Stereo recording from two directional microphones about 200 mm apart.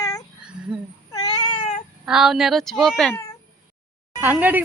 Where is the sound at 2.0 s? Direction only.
Centre (ahead or behind).